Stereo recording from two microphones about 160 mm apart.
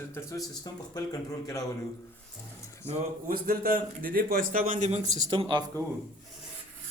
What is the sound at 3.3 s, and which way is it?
A man's voice, 65° right (ahead or behind).